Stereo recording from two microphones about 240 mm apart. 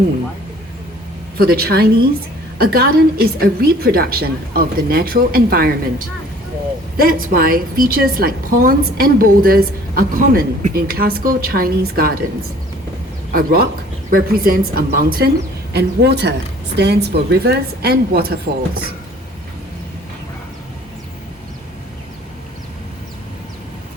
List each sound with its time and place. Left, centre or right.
1.4 s a woman's voice: right
13.3 s a woman's voice: right